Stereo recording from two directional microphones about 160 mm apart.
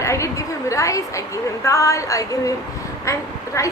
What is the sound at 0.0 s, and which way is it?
A woman's voice, 20° left (ahead or behind).